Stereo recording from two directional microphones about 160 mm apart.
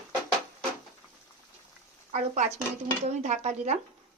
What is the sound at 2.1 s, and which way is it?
A woman's voice, 50° right (ahead or behind).